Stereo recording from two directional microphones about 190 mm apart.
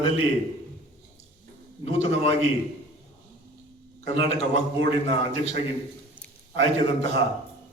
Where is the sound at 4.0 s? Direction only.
35° left (ahead or behind).